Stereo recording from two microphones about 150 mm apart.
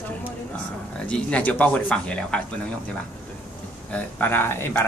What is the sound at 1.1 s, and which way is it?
Speech, 10° left (ahead or behind).